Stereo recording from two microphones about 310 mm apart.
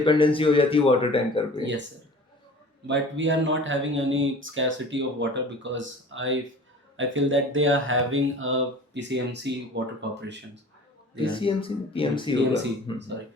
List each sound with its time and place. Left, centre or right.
0.0 s speech: centre
2.8 s speech: right
11.1 s speech: centre